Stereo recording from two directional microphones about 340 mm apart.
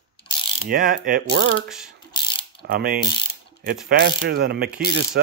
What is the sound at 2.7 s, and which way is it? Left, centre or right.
Mechanisms, right.